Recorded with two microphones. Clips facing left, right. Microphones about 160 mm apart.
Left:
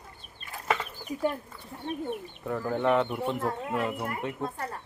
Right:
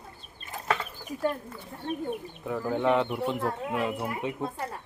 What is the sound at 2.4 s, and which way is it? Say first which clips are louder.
Speech: right 1 dB; 5° right (ahead or behind).